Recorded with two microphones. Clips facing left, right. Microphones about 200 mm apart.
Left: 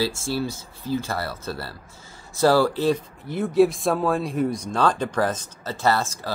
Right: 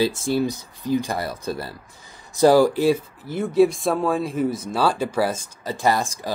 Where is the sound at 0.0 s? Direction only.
20° right (ahead or behind).